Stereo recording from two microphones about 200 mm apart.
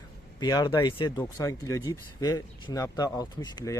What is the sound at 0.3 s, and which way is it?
Speech, 20° left (ahead or behind).